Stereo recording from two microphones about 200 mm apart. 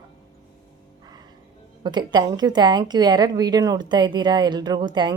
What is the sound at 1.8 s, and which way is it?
Speech, 20° right (ahead or behind).